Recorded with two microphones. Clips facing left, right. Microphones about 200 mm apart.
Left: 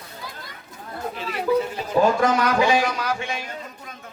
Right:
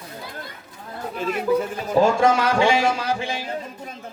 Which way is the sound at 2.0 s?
30° right (ahead or behind).